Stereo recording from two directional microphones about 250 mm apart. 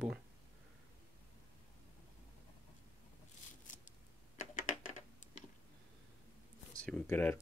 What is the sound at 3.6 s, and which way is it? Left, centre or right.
Scissors, left.